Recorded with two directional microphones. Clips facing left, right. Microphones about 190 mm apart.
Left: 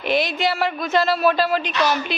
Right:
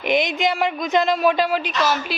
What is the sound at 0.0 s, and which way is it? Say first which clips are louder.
A man's voice: right 1 dB; 15° right (ahead or behind).